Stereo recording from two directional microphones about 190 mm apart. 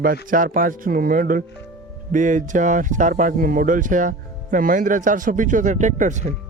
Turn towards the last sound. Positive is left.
turn(degrees=-40)  # may be behind; listen again after turning